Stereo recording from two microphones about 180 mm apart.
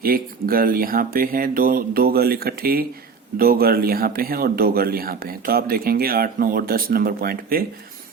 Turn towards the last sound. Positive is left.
turn(degrees=-55)  # may be behind; listen again after turning